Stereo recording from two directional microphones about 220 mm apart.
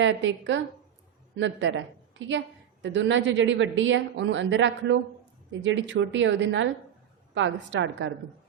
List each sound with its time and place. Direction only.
0.0 s a woman's voice: 60° right (ahead or behind)